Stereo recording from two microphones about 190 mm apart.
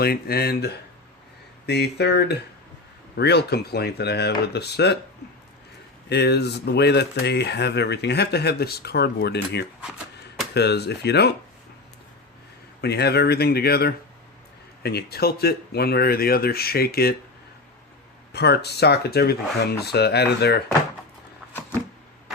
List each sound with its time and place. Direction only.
0.0 s speech: 55° left (ahead or behind)
6.1 s speech: 60° left (ahead or behind)
12.8 s speech: 60° left (ahead or behind)
18.3 s speech: 60° left (ahead or behind)